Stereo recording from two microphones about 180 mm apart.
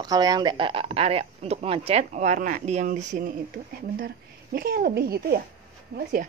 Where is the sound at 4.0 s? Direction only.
55° right (ahead or behind).